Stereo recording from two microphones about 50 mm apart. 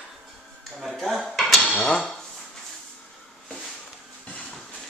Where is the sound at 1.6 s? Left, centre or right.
Centre.